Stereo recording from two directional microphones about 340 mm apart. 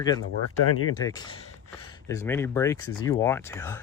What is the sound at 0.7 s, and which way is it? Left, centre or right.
Speech, left.